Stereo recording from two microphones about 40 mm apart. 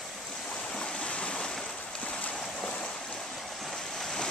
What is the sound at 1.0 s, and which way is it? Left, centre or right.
Waves, left.